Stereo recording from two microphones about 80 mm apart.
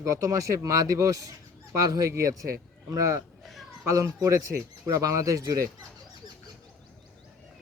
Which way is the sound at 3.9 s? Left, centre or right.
Right.